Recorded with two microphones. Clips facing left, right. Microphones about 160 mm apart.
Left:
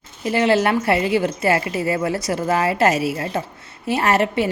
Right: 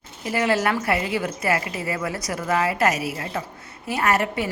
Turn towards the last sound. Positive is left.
turn(degrees=25)  # may be behind; listen again after turning